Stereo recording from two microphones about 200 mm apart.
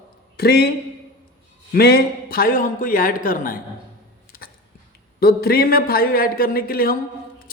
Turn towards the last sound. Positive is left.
turn(degrees=50)  # may be behind; listen again after turning